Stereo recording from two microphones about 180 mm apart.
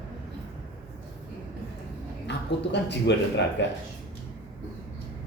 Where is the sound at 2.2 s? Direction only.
75° left (ahead or behind).